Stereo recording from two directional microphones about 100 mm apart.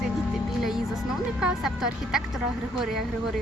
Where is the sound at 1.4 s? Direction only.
5° right (ahead or behind).